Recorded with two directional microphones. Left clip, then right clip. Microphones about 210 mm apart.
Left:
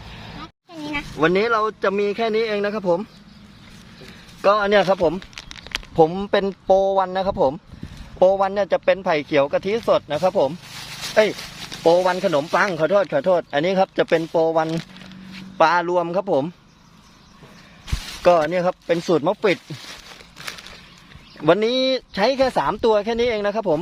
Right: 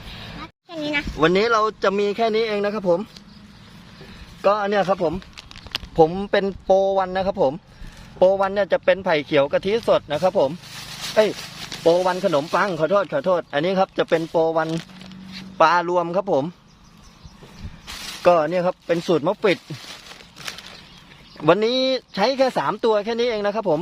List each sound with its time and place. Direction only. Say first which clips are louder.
0.7 s a sound: right 4 dB; 40° right (ahead or behind)
1.1 s speech: even; 5° right (ahead or behind)
4.4 s speech: left 3 dB; 20° left (ahead or behind)
5.7 s speech: even; centre (ahead or behind)
18.2 s speech: left 1 dB; centre (ahead or behind)
20.4 s a sound: even; centre (ahead or behind)
21.4 s speech: even; 5° right (ahead or behind)